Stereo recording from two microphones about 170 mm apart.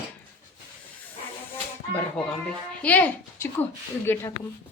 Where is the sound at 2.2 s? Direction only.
5° left (ahead or behind).